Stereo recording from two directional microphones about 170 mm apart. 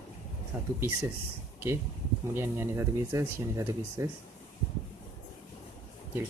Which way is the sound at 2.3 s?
15° right (ahead or behind).